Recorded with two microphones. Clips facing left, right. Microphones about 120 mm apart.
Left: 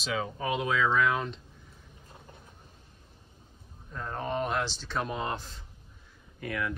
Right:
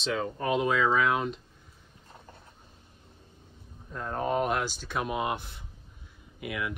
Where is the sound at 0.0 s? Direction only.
Centre (ahead or behind).